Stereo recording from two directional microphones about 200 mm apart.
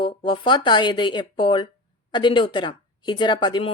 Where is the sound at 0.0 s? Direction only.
25° left (ahead or behind).